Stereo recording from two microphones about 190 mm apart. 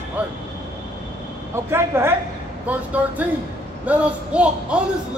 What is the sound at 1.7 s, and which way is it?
A man's voice, 15° right (ahead or behind).